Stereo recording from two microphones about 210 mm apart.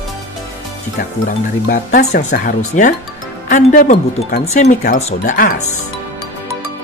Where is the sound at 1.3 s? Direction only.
45° left (ahead or behind).